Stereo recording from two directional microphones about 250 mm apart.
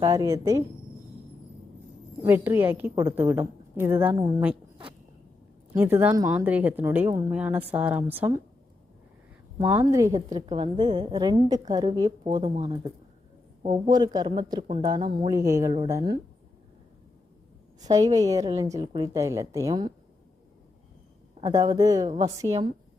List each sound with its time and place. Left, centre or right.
0.0 s speech: centre
2.2 s speech: centre
5.7 s speech: centre
9.6 s speech: centre
17.7 s speech: centre
21.5 s speech: centre